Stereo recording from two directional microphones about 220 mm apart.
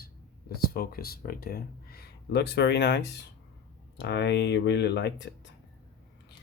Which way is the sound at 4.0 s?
50° left (ahead or behind).